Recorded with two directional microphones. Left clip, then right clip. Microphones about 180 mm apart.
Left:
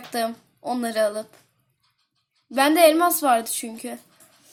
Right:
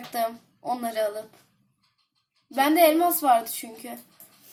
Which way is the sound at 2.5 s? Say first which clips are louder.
Left 3 dB; 35° left (ahead or behind).